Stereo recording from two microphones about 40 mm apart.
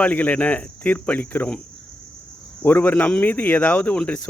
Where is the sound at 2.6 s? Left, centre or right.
Left.